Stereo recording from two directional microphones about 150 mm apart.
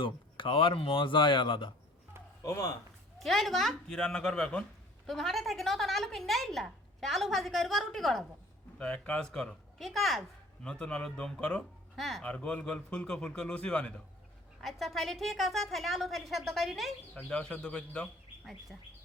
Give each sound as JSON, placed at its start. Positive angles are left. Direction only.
{"t": 0.0, "sound": "speech", "side_deg": 35}
{"t": 2.4, "sound": "speech", "side_deg": 20}
{"t": 3.2, "sound": "speech", "side_deg": 0}